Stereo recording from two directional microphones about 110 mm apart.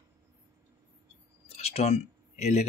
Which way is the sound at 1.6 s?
70° left (ahead or behind).